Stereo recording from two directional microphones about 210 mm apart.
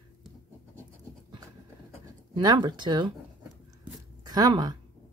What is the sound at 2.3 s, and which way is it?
Speech, 20° right (ahead or behind).